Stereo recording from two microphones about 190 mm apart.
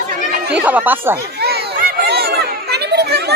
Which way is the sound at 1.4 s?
60° right (ahead or behind).